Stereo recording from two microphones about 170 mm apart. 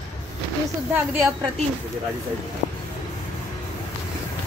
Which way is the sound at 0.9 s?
10° right (ahead or behind).